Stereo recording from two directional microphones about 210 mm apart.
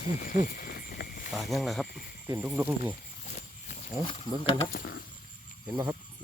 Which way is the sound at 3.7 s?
30° left (ahead or behind).